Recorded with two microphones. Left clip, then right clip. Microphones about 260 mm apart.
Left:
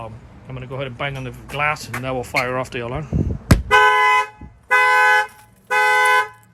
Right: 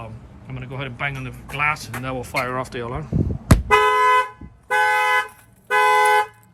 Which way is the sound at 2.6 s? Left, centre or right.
Right.